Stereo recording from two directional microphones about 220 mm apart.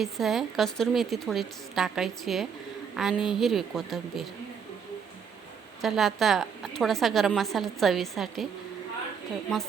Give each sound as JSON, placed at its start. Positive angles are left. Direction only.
{"t": 0.0, "sound": "a woman's voice", "side_deg": 0}
{"t": 5.8, "sound": "a woman's voice", "side_deg": 0}